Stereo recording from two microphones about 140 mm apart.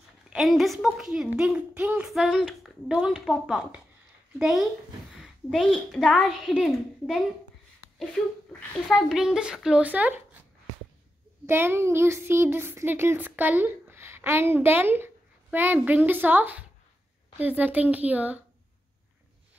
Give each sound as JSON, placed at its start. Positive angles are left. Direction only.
{"t": 0.3, "sound": "a woman's voice", "side_deg": 0}
{"t": 8.9, "sound": "a woman's voice", "side_deg": -5}
{"t": 11.4, "sound": "speech", "side_deg": -15}